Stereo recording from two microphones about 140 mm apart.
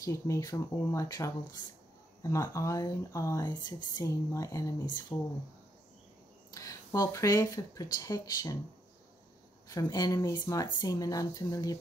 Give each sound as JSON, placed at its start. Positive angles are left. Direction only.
{"t": 0.0, "sound": "speech", "side_deg": 20}
{"t": 6.5, "sound": "speech", "side_deg": 25}
{"t": 9.7, "sound": "speech", "side_deg": 25}